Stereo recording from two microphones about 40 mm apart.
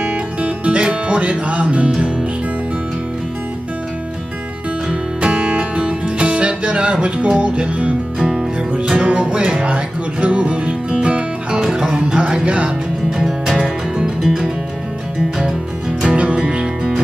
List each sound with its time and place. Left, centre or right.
0.0 s music: right
5.2 s music: right
11.7 s music: centre
14.2 s music: centre
16.1 s music: right